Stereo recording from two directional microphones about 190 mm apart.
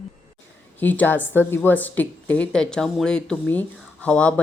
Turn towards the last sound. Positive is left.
turn(degrees=5)  # may be behind; listen again after turning